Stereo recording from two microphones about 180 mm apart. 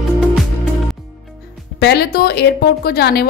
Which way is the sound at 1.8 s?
65° left (ahead or behind).